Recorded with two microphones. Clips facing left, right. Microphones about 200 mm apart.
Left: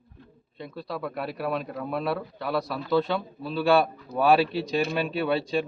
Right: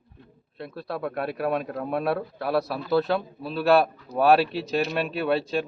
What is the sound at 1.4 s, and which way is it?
Speech, 20° right (ahead or behind).